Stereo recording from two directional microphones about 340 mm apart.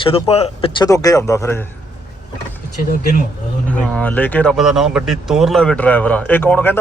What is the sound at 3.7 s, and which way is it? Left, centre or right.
Speech, centre.